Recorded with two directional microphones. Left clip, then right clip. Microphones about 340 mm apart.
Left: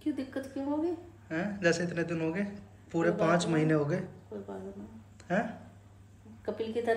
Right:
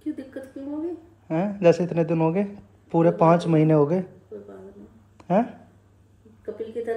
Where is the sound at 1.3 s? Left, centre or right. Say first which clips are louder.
Right 10 dB; centre.